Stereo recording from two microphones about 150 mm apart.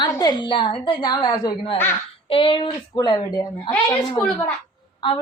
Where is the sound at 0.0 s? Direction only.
30° left (ahead or behind).